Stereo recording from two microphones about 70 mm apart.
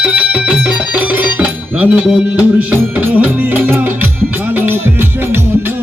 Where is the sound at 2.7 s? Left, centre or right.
Right.